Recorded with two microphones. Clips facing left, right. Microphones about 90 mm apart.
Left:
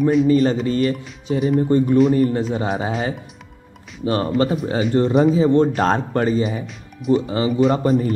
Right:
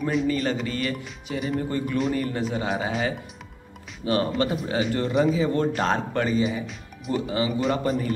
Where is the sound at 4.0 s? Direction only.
30° left (ahead or behind).